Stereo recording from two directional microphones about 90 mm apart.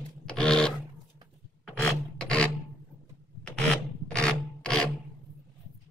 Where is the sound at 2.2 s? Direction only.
10° left (ahead or behind).